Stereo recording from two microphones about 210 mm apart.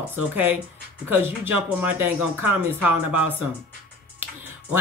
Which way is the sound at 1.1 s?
10° right (ahead or behind).